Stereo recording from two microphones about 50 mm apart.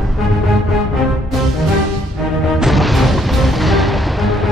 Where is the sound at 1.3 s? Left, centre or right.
Centre.